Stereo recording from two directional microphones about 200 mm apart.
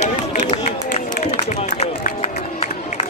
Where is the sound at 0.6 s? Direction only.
35° left (ahead or behind).